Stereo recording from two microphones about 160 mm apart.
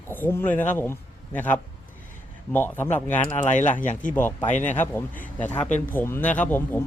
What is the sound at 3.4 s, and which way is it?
Speech, 50° left (ahead or behind).